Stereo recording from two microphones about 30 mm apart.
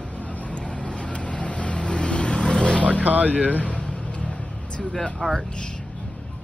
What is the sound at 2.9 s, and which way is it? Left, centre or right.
Speech, right.